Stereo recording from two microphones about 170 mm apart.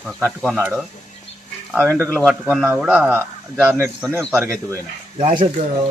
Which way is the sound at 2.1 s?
Centre (ahead or behind).